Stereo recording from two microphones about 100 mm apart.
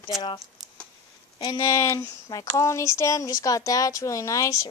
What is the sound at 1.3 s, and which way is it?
Speech, 40° left (ahead or behind).